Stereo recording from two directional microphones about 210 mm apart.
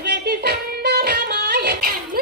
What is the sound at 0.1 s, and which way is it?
Music, 50° right (ahead or behind).